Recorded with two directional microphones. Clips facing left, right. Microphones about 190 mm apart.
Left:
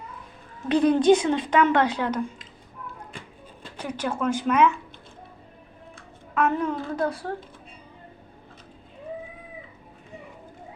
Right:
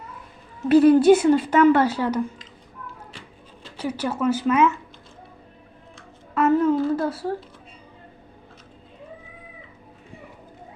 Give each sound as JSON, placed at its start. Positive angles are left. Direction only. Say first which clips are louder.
{"t": 0.7, "sound": "speech", "louder": "right 5 dB", "side_deg": -5}
{"t": 3.1, "sound": "music", "louder": "left 1 dB", "side_deg": 50}
{"t": 3.8, "sound": "speech", "louder": "right 3 dB", "side_deg": -10}
{"t": 6.3, "sound": "a child's voice", "louder": "right 6 dB", "side_deg": -5}